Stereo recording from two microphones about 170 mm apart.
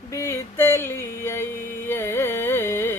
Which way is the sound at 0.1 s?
15° left (ahead or behind).